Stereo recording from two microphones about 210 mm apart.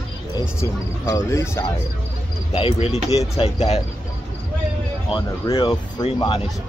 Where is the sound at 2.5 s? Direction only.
30° left (ahead or behind).